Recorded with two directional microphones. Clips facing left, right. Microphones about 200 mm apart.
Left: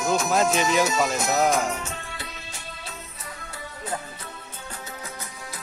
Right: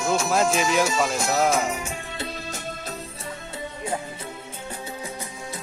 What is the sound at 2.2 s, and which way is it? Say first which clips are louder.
Music: right 8 dB; 40° right (ahead or behind).